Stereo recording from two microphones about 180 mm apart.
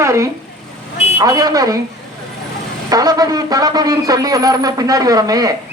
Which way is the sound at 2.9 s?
20° right (ahead or behind).